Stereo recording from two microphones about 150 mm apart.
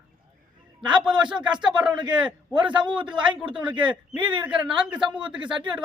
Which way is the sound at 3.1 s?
35° right (ahead or behind).